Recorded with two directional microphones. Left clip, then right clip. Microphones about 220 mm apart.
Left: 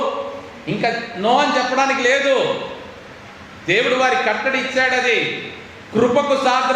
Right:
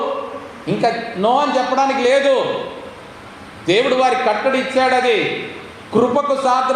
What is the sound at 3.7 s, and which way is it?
Speech, 15° right (ahead or behind).